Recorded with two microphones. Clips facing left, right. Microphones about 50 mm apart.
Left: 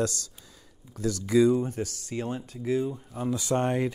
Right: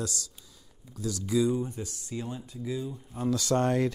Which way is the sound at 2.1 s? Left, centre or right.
Left.